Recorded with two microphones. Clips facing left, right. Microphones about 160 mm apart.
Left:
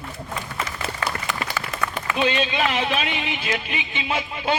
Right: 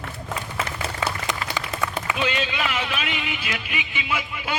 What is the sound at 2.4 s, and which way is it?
Speech, 30° left (ahead or behind).